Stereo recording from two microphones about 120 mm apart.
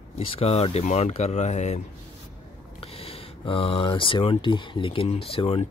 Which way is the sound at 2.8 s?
55° left (ahead or behind).